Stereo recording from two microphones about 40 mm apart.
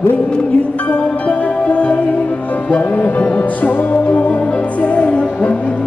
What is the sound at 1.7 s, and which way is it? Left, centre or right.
Music, left.